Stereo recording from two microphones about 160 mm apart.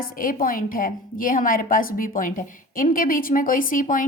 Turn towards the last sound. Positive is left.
turn(degrees=55)  # may be behind; listen again after turning